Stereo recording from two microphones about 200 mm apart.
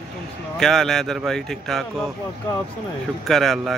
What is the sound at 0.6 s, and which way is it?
Speech, centre (ahead or behind).